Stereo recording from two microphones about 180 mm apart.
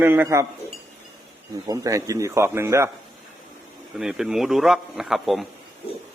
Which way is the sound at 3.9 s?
5° right (ahead or behind).